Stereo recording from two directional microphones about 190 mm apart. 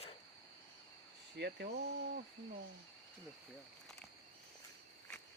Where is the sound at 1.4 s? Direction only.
60° right (ahead or behind).